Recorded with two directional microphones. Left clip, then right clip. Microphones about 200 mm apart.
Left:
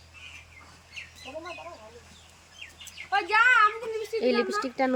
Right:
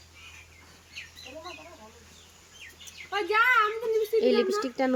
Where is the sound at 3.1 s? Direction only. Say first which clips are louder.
Left 2 dB; 40° left (ahead or behind).